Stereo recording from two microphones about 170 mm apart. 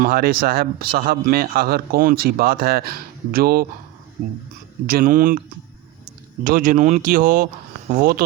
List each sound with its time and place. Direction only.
0.0 s a man's voice: 60° right (ahead or behind)
4.9 s speech: 55° right (ahead or behind)
6.4 s speech: 50° right (ahead or behind)